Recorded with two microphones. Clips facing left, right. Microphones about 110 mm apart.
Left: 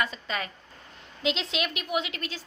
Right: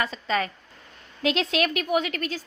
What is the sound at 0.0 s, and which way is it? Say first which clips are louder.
Speech: right 5 dB; 40° right (ahead or behind).